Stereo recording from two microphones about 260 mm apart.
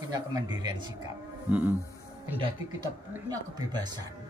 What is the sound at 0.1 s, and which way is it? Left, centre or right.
Speech, centre.